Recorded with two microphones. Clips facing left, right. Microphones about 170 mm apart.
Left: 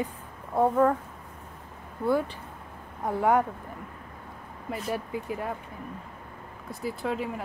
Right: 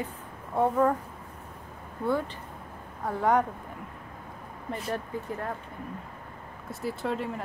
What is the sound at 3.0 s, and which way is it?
Speech, 10° left (ahead or behind).